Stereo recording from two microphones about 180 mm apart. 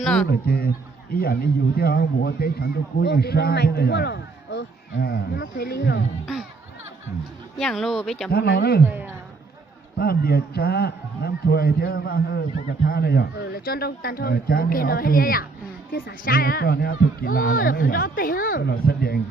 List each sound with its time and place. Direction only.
0.0 s speech: 5° left (ahead or behind)
0.3 s a man's voice: 60° left (ahead or behind)
7.6 s speech: centre (ahead or behind)
8.3 s a man's voice: 60° left (ahead or behind)
8.9 s a sound: 10° right (ahead or behind)
10.0 s a man's voice: 60° left (ahead or behind)